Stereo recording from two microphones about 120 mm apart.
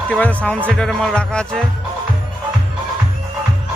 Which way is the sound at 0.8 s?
5° left (ahead or behind).